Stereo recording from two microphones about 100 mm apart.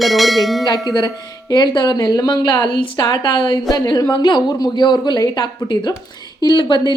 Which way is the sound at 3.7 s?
40° left (ahead or behind).